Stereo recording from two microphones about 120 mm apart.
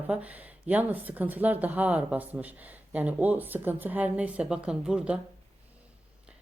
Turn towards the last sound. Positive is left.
turn(degrees=-5)  # may be behind; listen again after turning